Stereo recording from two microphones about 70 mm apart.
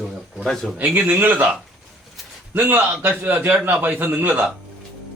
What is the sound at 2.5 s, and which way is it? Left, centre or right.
A man's voice, right.